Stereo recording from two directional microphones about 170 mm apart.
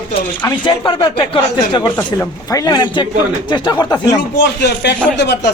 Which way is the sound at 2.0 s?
20° left (ahead or behind).